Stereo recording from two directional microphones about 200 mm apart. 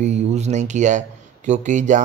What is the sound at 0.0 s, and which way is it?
Speech, 35° right (ahead or behind).